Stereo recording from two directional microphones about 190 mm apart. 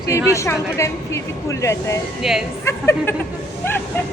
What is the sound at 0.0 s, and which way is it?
Speech, 15° left (ahead or behind).